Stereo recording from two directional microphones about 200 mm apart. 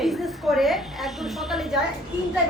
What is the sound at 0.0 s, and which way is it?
A woman's voice, centre (ahead or behind).